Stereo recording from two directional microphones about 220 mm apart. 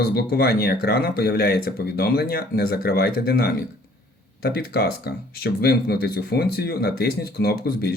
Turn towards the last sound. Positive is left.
turn(degrees=45)  # may be behind; listen again after turning